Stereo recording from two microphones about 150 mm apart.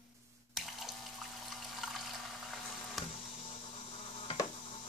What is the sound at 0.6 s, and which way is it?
Water tap, centre (ahead or behind).